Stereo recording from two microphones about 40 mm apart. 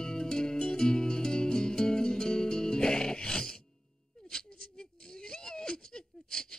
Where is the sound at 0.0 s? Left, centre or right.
Centre.